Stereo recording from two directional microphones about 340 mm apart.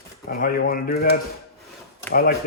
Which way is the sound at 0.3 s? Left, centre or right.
Left.